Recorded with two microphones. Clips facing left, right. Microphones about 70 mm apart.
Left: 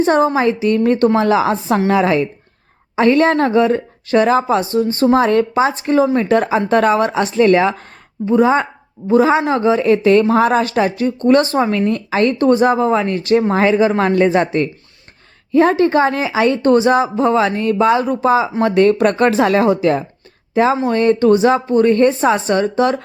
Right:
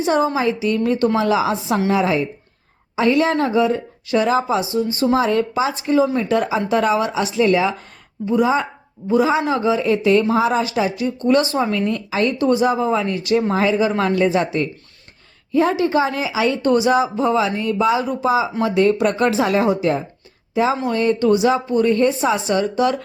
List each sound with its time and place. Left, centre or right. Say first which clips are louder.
0.0 s speech: left 4 dB; left
1.9 s speech: left 4 dB; left
2.9 s speech: left 4 dB; left
20.5 s speech: left 4 dB; left